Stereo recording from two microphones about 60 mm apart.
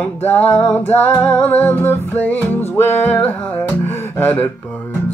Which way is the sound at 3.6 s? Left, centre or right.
Left.